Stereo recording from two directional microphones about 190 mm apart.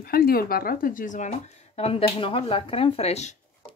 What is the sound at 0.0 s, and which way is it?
Speech, 50° left (ahead or behind).